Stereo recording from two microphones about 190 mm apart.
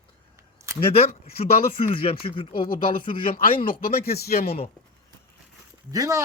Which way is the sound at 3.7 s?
50° left (ahead or behind).